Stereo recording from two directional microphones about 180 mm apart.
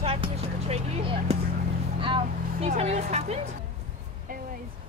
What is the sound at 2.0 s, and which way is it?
Vehicle, 30° right (ahead or behind).